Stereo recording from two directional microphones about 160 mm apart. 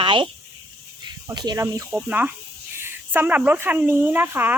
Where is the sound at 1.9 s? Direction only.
10° right (ahead or behind).